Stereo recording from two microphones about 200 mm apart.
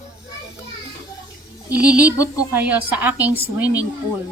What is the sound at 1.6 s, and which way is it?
A woman's voice, 5° right (ahead or behind).